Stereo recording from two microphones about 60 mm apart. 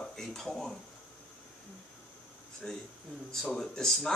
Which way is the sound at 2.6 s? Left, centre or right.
Centre.